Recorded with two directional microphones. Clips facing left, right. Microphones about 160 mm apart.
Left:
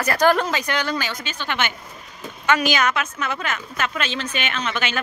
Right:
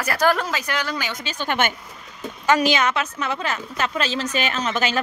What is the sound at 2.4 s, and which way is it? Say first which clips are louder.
A woman's voice: right 1 dB; 35° right (ahead or behind).